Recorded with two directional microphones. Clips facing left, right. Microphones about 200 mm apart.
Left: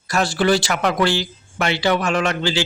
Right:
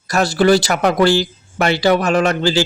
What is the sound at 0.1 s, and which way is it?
Speech, 40° right (ahead or behind).